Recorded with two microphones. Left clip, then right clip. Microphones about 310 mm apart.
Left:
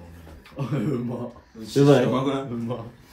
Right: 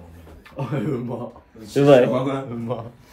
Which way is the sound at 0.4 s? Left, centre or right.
Centre.